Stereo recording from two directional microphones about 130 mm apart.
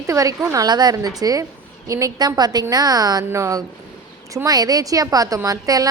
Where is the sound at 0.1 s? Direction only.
25° right (ahead or behind).